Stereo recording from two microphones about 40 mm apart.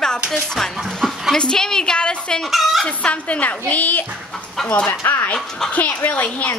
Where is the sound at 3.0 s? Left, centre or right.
Left.